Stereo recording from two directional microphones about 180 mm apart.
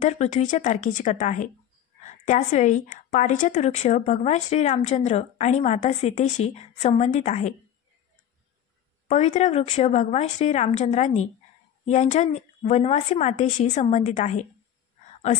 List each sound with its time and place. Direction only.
0.0 s a woman's voice: 40° left (ahead or behind)
9.0 s a woman's voice: 40° left (ahead or behind)